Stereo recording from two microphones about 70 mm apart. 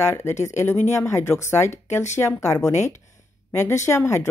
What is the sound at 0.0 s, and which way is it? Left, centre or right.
Speech, left.